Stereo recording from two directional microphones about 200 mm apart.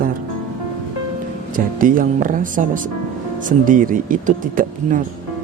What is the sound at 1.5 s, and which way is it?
Speech, 45° right (ahead or behind).